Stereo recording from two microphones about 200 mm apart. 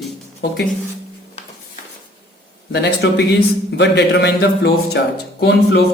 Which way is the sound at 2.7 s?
55° left (ahead or behind).